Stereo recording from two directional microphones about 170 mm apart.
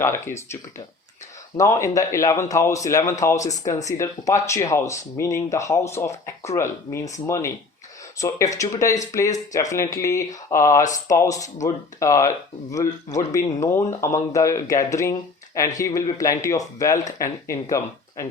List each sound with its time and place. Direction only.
0.0 s speech: 15° left (ahead or behind)
1.5 s speech: 20° left (ahead or behind)